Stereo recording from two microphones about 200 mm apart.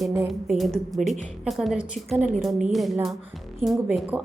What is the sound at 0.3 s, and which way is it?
A woman's voice, centre (ahead or behind).